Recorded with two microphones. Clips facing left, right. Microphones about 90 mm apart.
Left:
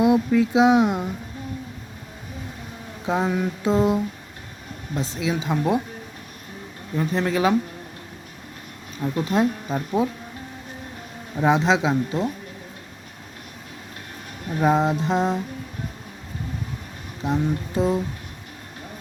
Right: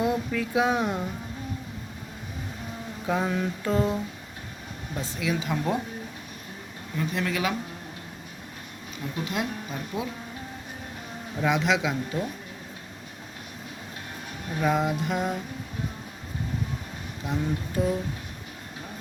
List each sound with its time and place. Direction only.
0.0 s speech: 20° left (ahead or behind)
3.1 s speech: 15° left (ahead or behind)
6.9 s speech: 35° left (ahead or behind)
9.1 s speech: 35° left (ahead or behind)
11.3 s speech: 30° left (ahead or behind)
14.6 s speech: 30° left (ahead or behind)
17.2 s speech: 25° left (ahead or behind)